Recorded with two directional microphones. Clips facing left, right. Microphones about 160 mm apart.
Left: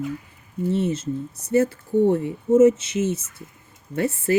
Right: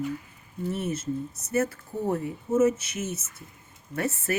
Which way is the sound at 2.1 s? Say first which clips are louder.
Left 7 dB; 30° left (ahead or behind).